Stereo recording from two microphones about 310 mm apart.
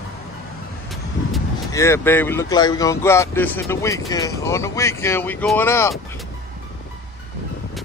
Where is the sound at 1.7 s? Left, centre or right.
Centre.